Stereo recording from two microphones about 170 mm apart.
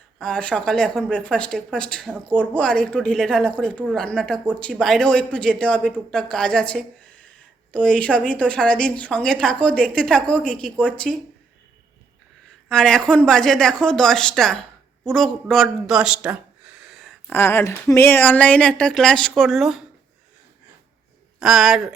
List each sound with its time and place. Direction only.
0.2 s a woman's voice: 5° left (ahead or behind)
12.6 s a woman's voice: 5° left (ahead or behind)
17.3 s a woman's voice: 15° left (ahead or behind); by 19.8 s centre (ahead or behind)
21.3 s speech: centre (ahead or behind)